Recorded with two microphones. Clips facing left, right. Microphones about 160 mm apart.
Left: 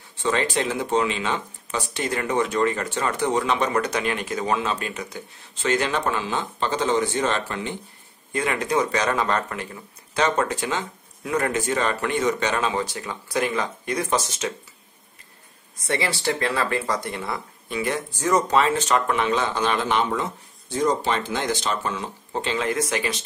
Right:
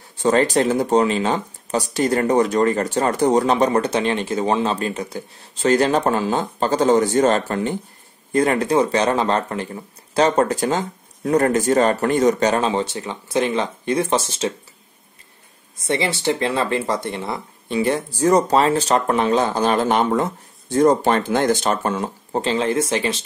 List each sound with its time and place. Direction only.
0.2 s speech: 40° right (ahead or behind)
15.9 s speech: 20° right (ahead or behind)